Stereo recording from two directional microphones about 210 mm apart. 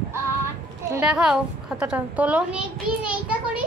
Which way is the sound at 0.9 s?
5° right (ahead or behind).